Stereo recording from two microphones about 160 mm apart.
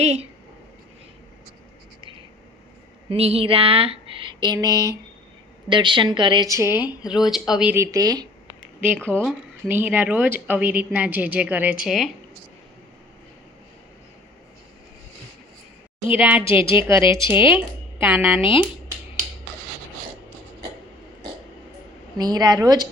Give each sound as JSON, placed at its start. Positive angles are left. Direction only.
{"t": 0.0, "sound": "speech", "side_deg": -40}
{"t": 3.1, "sound": "a sound", "side_deg": -35}
{"t": 5.6, "sound": "a woman's voice", "side_deg": -30}
{"t": 7.1, "sound": "a woman's voice", "side_deg": 0}
{"t": 7.8, "sound": "a woman's voice", "side_deg": -20}
{"t": 8.4, "sound": "a sound", "side_deg": -10}
{"t": 9.6, "sound": "a woman's voice", "side_deg": -10}
{"t": 16.0, "sound": "a woman's voice", "side_deg": -10}
{"t": 22.2, "sound": "a woman's voice", "side_deg": -25}